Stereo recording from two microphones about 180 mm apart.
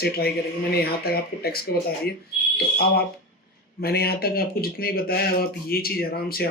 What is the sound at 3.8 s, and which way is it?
Speech, 60° left (ahead or behind).